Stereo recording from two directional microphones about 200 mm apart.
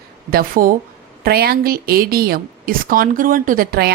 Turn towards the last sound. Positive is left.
turn(degrees=-45)  # may be behind; listen again after turning